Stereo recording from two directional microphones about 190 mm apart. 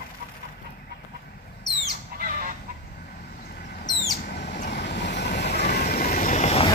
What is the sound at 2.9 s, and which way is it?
Vehicle, 50° left (ahead or behind).